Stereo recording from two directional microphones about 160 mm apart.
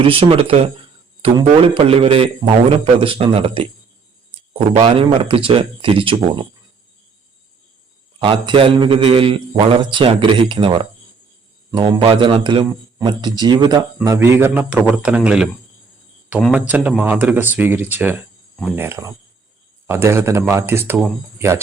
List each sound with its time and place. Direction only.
0.0 s a man's voice: 35° right (ahead or behind)
8.2 s a man's voice: 35° right (ahead or behind); by 15.4 s 5° right (ahead or behind)
16.5 s speech: 10° right (ahead or behind)